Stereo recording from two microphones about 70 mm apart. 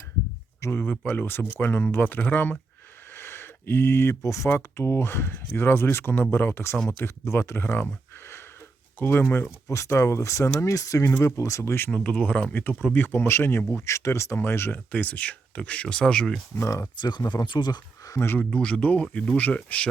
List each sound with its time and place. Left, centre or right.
0.7 s speech: left
9.0 s speech: left
11.9 s speech: centre
12.6 s speech: left
14.9 s speech: left
16.6 s speech: left
17.0 s speech: left
18.3 s speech: centre